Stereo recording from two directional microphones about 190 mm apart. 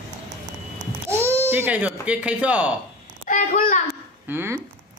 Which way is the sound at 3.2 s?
45° left (ahead or behind).